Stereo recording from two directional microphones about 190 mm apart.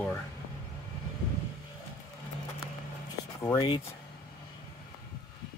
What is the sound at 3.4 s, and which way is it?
Speech, 20° left (ahead or behind).